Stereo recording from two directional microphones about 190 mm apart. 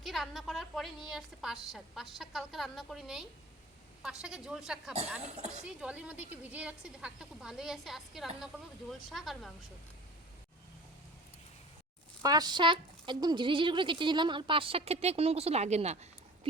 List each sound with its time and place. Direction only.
0.0 s a woman's voice: centre (ahead or behind)
5.2 s speech: 35° right (ahead or behind)
5.6 s a woman's voice: 5° right (ahead or behind)
12.2 s a woman's voice: 20° right (ahead or behind)